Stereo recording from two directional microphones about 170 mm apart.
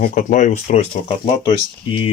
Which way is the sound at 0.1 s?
45° left (ahead or behind).